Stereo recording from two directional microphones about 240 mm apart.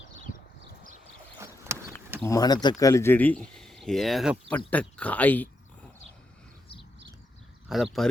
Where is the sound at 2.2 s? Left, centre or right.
Centre.